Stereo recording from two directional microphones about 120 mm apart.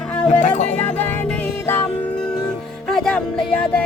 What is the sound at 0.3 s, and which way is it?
Music, 90° left.